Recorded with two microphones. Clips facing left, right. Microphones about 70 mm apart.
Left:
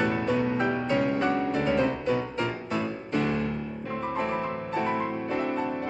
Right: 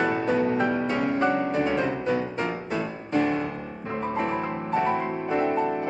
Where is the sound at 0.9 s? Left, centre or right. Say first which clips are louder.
Right 1 dB; centre.